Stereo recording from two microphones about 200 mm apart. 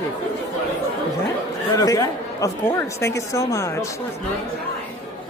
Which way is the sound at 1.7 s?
15° left (ahead or behind).